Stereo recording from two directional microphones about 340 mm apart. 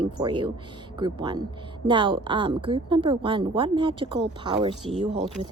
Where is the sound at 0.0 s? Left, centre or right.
Centre.